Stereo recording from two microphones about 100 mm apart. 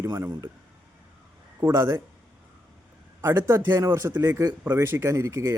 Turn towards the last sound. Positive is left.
turn(degrees=-25)  # may be behind; listen again after turning